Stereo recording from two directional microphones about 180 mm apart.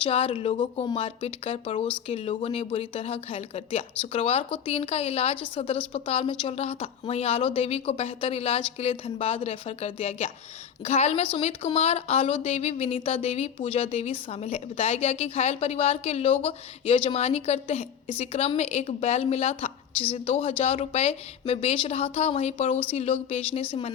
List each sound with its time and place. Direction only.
0.0 s a woman's voice: 30° left (ahead or behind)